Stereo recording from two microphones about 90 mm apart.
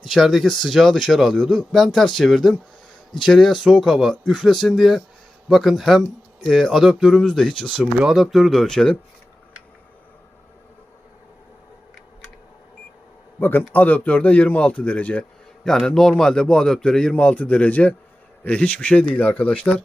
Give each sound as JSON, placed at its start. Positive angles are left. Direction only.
{"t": 0.0, "sound": "speech", "side_deg": 0}
{"t": 7.8, "sound": "speech", "side_deg": -15}
{"t": 8.1, "sound": "speech", "side_deg": 0}
{"t": 13.4, "sound": "a man's voice", "side_deg": 20}